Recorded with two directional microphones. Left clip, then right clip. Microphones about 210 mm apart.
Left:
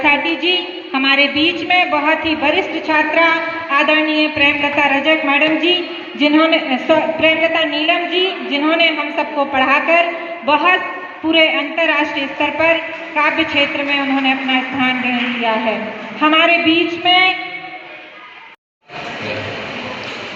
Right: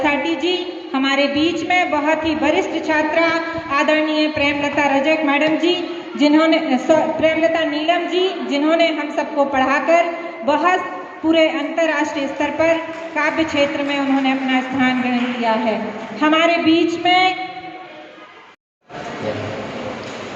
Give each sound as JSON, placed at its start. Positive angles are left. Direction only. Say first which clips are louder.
{"t": 0.0, "sound": "a woman's voice", "louder": "left 4 dB", "side_deg": -15}